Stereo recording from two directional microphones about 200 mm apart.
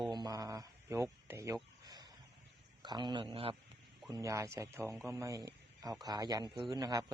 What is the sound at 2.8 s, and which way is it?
Speech, 20° right (ahead or behind).